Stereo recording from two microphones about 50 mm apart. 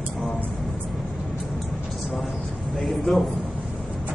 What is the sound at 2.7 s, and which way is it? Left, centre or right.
Speech, centre.